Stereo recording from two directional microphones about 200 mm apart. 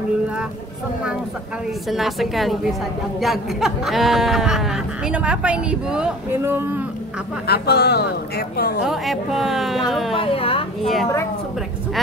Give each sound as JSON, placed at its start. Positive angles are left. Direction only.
{"t": 1.9, "sound": "speech", "side_deg": 0}
{"t": 7.4, "sound": "speech", "side_deg": 55}
{"t": 8.8, "sound": "speech", "side_deg": 0}
{"t": 10.1, "sound": "a woman's voice", "side_deg": 30}